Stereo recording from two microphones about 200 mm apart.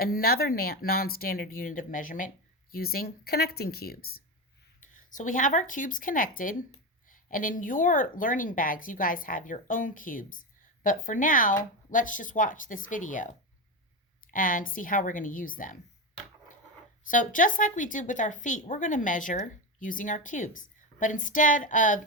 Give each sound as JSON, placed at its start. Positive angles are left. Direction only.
{"t": 0.0, "sound": "a woman's voice", "side_deg": 50}
{"t": 14.3, "sound": "speech", "side_deg": 45}
{"t": 17.0, "sound": "a woman's voice", "side_deg": 40}